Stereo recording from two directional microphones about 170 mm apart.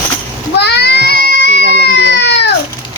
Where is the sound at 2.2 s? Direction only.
90° left.